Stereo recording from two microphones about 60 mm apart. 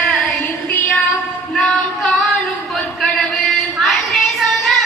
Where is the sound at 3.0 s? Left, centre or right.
Centre.